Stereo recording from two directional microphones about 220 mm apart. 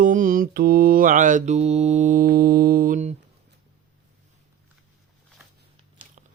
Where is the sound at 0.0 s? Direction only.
35° right (ahead or behind).